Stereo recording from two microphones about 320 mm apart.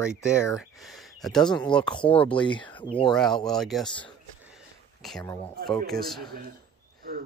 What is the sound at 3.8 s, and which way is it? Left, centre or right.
Speech, centre.